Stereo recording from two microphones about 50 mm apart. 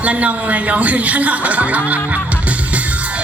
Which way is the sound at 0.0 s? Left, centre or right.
Right.